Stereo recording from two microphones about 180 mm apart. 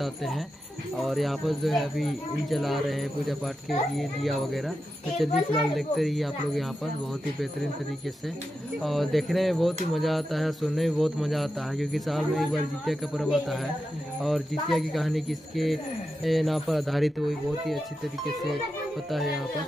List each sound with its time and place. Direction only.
0.0 s speech: centre (ahead or behind)
8.8 s speech: centre (ahead or behind)
19.0 s speech: centre (ahead or behind)